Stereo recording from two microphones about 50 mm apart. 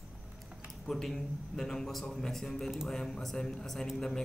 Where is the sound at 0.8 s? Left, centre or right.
Centre.